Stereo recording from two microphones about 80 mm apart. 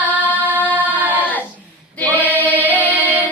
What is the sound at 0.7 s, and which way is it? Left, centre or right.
Singing, right.